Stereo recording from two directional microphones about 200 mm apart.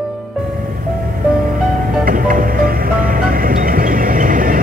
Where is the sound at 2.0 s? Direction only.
45° right (ahead or behind).